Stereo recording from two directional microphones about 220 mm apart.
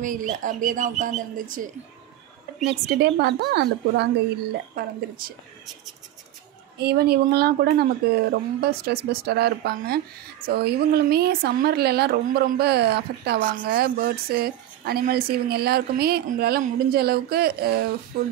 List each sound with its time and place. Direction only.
0.0 s speech: 35° right (ahead or behind)
3.0 s speech: 50° right (ahead or behind)
6.8 s speech: 45° right (ahead or behind)